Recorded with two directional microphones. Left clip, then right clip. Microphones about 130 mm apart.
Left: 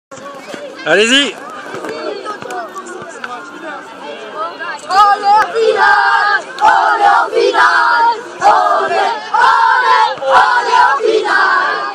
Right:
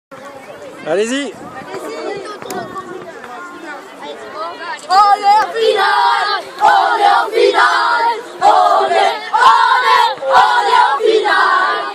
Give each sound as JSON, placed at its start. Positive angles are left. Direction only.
{"t": 0.8, "sound": "speech", "side_deg": 0}
{"t": 4.4, "sound": "a sound", "side_deg": -25}
{"t": 6.6, "sound": "battle cry", "side_deg": -30}